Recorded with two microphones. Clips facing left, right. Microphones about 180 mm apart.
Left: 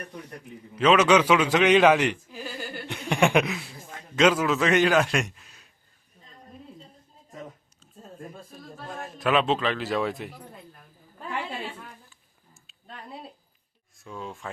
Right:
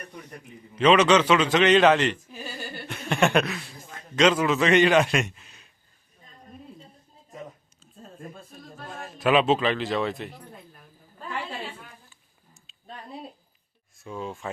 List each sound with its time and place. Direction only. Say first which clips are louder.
0.8 s a man's voice: right 1 dB; 5° left (ahead or behind)
2.8 s chuckle: even; 15° left (ahead or behind)
4.1 s a man's voice: even; 5° left (ahead or behind)
9.1 s a man's voice: right 3 dB; 5° right (ahead or behind)
14.0 s a man's voice: right 3 dB; centre (ahead or behind)